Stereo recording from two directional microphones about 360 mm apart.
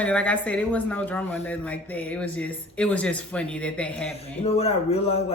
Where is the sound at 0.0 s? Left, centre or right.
Centre.